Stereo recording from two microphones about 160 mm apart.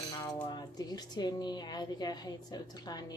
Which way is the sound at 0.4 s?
25° left (ahead or behind).